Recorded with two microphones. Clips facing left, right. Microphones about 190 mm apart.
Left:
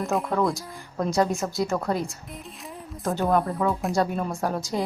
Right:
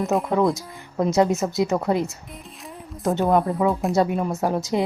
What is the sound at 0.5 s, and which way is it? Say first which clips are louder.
A woman's voice: right 4 dB; 20° right (ahead or behind).